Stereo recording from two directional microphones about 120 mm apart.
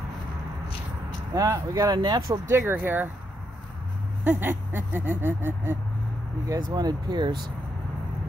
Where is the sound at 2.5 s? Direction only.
20° right (ahead or behind).